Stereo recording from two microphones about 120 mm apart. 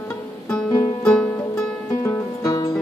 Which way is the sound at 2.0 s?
25° left (ahead or behind).